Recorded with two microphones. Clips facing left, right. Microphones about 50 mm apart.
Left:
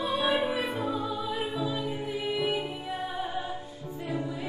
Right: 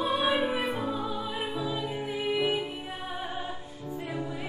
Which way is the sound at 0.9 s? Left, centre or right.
Right.